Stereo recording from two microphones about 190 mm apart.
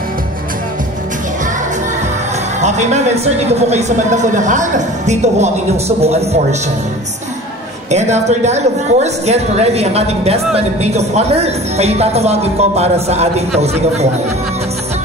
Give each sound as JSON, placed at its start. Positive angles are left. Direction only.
{"t": 2.6, "sound": "a woman's voice", "side_deg": -35}
{"t": 7.9, "sound": "a woman's voice", "side_deg": -35}